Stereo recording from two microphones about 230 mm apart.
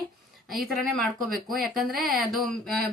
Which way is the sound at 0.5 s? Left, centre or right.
Centre.